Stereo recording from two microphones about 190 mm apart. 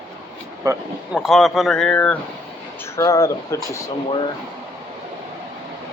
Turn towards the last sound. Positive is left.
turn(degrees=20)  # may be behind; listen again after turning